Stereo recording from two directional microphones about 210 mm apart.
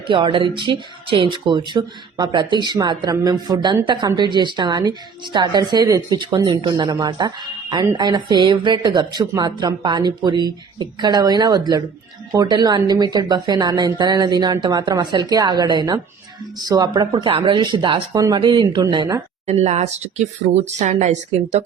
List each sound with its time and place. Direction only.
0.1 s speech: 25° right (ahead or behind)
19.5 s speech: 30° right (ahead or behind)